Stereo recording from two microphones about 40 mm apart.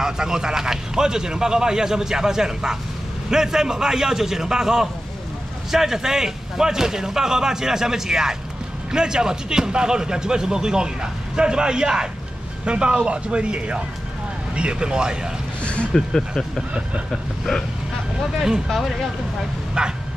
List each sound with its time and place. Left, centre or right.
0.0 s a man's voice: centre
15.6 s a sound: left
15.9 s speech: centre
18.7 s speech: centre
19.8 s a man's voice: right